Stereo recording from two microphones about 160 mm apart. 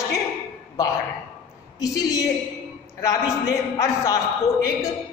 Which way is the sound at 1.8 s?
20° left (ahead or behind).